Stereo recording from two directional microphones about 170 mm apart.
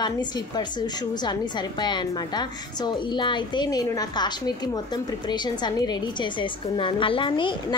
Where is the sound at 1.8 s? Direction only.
25° left (ahead or behind).